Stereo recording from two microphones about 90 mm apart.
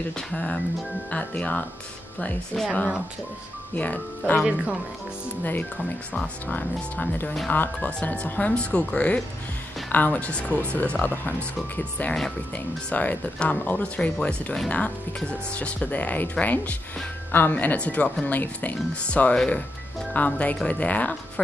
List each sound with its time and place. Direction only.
0.3 s speech: 10° left (ahead or behind)
3.7 s speech: 15° left (ahead or behind)
4.4 s speech: 15° right (ahead or behind)
6.4 s speech: 20° left (ahead or behind)